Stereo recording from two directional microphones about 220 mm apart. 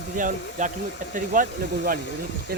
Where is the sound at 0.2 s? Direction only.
35° right (ahead or behind).